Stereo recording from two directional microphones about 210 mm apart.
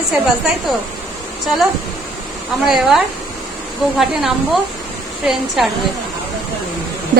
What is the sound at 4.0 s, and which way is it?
Speech, centre (ahead or behind).